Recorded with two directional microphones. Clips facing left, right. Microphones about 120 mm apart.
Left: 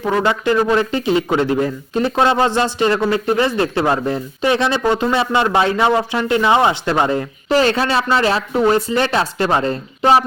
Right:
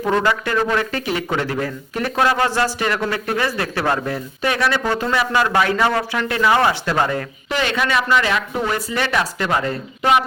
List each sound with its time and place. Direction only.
0.2 s speech: 20° left (ahead or behind)
7.5 s speech: 35° left (ahead or behind)